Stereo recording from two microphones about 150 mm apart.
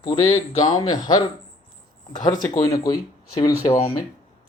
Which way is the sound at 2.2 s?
25° left (ahead or behind).